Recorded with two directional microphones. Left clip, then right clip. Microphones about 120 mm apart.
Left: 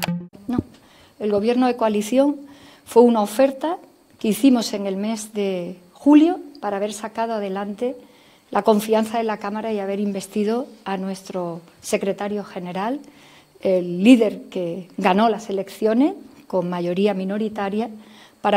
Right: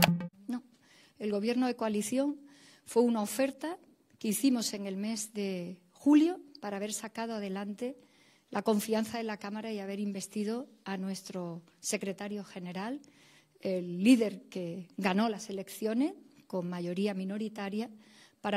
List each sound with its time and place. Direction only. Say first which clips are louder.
1.2 s a woman's voice: left 13 dB; 45° right (ahead or behind)